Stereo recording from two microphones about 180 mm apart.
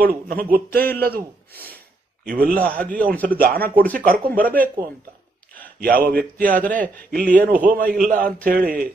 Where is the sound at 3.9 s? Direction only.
50° right (ahead or behind).